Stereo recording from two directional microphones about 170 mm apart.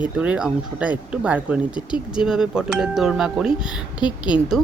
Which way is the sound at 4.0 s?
25° left (ahead or behind).